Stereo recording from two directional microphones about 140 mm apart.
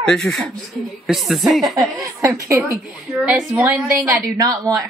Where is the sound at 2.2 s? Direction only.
20° right (ahead or behind).